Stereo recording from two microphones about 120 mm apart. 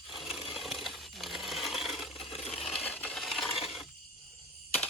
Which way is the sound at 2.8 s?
10° left (ahead or behind).